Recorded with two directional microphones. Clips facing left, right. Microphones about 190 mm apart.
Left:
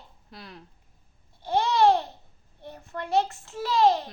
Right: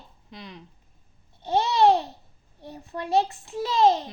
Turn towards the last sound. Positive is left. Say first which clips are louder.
# right 1 dB
turn(degrees=-20)  # may be behind; listen again after turning